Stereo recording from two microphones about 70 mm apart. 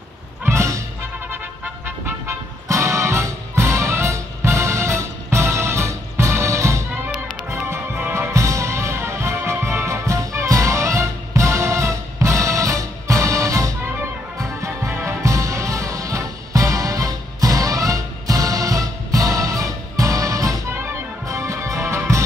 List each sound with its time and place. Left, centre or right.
0.5 s music: right
1.9 s music: right
2.7 s music: right
20.7 s music: right
21.3 s music: right